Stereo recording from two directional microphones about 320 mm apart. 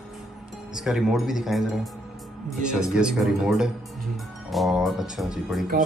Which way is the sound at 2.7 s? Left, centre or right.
Centre.